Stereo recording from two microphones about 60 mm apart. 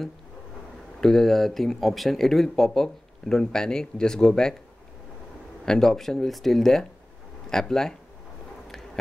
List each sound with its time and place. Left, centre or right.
1.0 s speech: centre
5.7 s speech: centre